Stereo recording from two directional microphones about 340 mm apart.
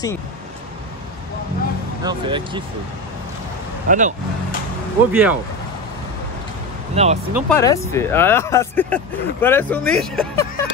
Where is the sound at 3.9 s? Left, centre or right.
Right.